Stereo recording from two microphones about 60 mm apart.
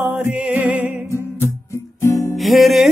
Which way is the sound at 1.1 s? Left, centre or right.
Left.